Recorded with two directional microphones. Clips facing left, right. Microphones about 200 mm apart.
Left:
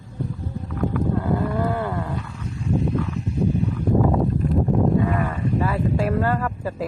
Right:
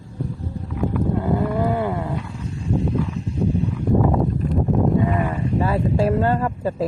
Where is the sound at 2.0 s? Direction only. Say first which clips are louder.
Right 2 dB; 30° right (ahead or behind).